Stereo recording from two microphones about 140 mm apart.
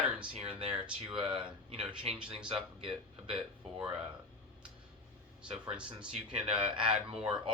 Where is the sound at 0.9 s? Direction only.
40° right (ahead or behind).